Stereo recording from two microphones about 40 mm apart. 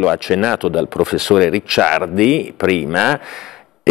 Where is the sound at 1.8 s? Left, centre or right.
Centre.